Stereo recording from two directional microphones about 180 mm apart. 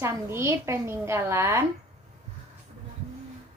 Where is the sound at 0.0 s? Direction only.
15° right (ahead or behind).